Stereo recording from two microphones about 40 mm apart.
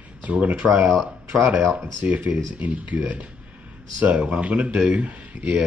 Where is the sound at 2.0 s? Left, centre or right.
Right.